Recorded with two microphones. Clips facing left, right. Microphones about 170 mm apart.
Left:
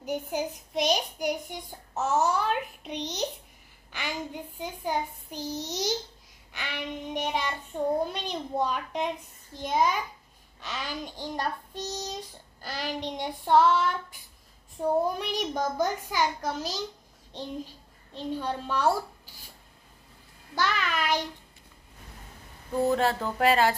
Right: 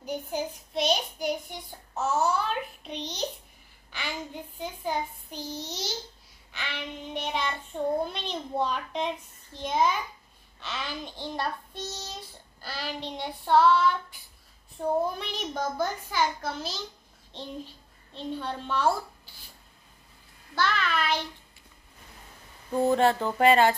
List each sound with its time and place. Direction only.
0.0 s a child's voice: 15° left (ahead or behind)
11.8 s child singing: 40° left (ahead or behind)
12.1 s a child's voice: 15° left (ahead or behind)
15.0 s a child's voice: 15° left (ahead or behind)
20.5 s a child's voice: 15° left (ahead or behind)
22.7 s a sound: centre (ahead or behind)